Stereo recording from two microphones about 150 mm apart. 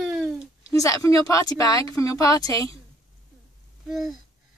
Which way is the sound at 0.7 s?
20° left (ahead or behind).